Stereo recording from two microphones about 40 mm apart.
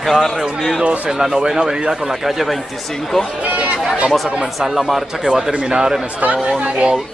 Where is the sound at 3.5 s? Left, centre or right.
Right.